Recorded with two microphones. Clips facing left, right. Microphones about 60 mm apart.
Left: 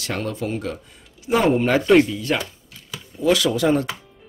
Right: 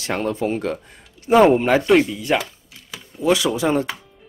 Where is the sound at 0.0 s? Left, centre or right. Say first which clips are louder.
Right 4 dB; right.